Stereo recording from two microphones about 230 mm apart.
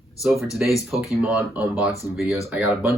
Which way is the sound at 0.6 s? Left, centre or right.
Centre.